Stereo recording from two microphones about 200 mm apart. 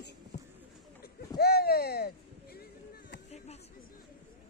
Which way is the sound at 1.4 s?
50° left (ahead or behind).